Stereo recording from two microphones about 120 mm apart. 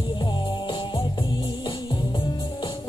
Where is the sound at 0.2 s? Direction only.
40° left (ahead or behind).